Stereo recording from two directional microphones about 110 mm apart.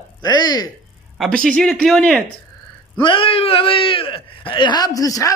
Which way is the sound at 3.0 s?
55° left (ahead or behind).